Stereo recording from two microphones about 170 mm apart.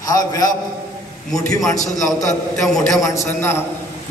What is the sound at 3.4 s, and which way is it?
Speech, 15° left (ahead or behind).